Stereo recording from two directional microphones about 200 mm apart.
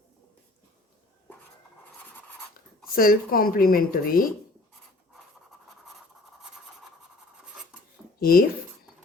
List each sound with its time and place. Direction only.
2.9 s speech: 45° left (ahead or behind)
8.2 s speech: 50° left (ahead or behind)